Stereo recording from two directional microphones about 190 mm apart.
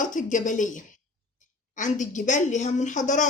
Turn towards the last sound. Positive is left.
turn(degrees=40)  # may be behind; listen again after turning